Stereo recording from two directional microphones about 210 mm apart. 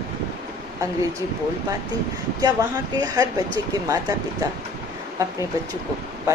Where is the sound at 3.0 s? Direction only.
15° right (ahead or behind).